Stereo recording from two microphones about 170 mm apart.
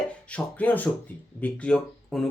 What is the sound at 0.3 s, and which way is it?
Speech, 10° left (ahead or behind).